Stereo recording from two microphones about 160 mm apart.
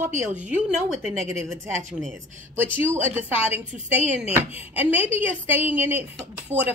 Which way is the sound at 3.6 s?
50° right (ahead or behind).